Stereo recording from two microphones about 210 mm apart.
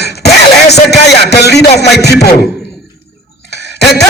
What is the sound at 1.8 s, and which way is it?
Speech, 50° left (ahead or behind).